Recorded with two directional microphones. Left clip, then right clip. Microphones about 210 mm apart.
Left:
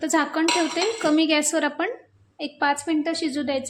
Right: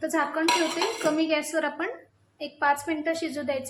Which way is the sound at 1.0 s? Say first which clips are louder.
Left 5 dB; 45° left (ahead or behind).